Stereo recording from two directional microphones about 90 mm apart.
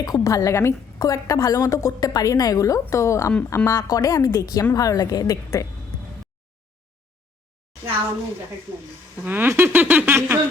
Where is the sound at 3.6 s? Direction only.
45° left (ahead or behind).